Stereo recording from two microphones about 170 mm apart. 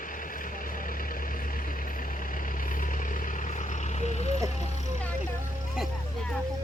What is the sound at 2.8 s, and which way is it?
Vehicle, 50° left (ahead or behind).